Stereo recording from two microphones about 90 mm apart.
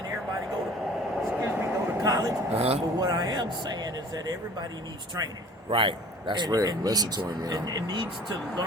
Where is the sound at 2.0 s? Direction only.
40° right (ahead or behind).